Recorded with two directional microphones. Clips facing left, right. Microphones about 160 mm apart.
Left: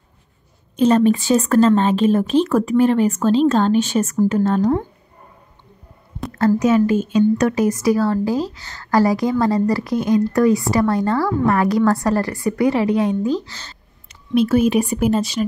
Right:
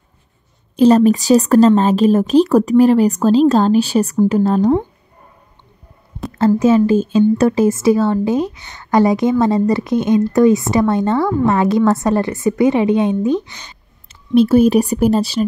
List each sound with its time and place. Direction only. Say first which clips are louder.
0.7 s speech: right 4 dB; 35° right (ahead or behind)
6.3 s speech: right 3 dB; 25° right (ahead or behind)
14.3 s speech: right 5 dB; 30° right (ahead or behind)